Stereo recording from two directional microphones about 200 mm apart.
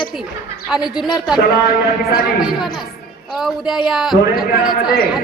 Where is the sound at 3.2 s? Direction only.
Centre (ahead or behind).